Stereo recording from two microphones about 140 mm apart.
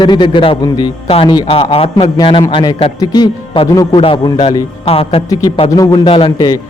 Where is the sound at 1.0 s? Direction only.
40° left (ahead or behind).